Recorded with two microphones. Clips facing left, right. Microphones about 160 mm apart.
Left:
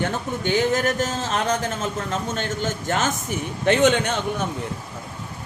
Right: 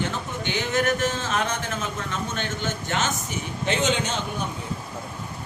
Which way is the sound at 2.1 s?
40° left (ahead or behind).